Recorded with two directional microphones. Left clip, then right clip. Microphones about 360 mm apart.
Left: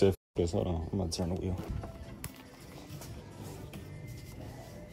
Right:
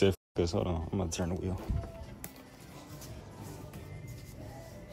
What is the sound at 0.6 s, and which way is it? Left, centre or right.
Speech, centre.